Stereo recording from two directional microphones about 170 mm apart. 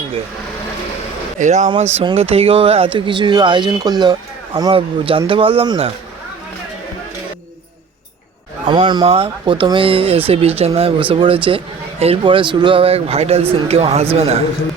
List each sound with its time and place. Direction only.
1.4 s speech: 45° right (ahead or behind)
1.7 s speech: 35° right (ahead or behind)
8.6 s speech: 30° right (ahead or behind)